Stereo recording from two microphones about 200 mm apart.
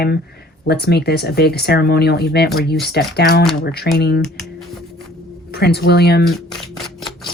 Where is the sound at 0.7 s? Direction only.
55° left (ahead or behind).